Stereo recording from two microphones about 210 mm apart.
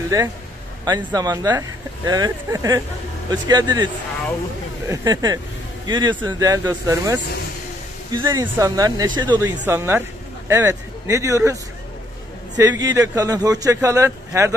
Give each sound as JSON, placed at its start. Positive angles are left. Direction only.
{"t": 0.8, "sound": "speech", "side_deg": -20}
{"t": 12.5, "sound": "speech", "side_deg": -15}